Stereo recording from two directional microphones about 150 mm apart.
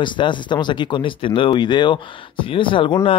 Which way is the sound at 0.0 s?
30° left (ahead or behind).